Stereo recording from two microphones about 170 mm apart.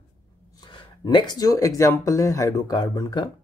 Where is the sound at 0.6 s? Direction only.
25° left (ahead or behind).